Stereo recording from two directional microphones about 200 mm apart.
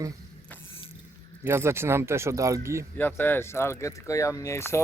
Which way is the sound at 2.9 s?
10° left (ahead or behind).